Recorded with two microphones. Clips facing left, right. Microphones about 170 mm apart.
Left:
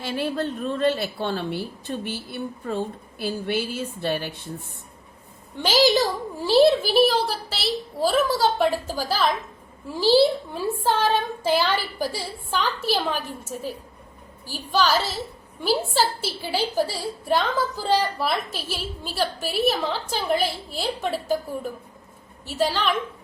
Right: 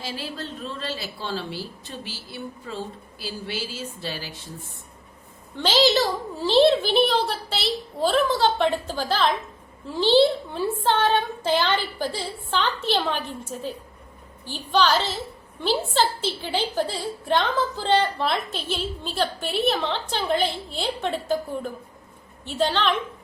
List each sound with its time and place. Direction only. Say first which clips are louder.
0.0 s a woman's voice: left 7 dB; 60° left (ahead or behind)
5.5 s a woman's voice: left 1 dB; 10° left (ahead or behind)